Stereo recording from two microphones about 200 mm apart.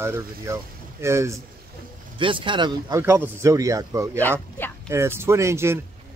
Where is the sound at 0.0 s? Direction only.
15° right (ahead or behind).